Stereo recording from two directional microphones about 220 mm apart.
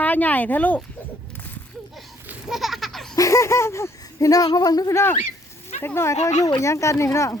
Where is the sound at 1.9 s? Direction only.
Centre (ahead or behind).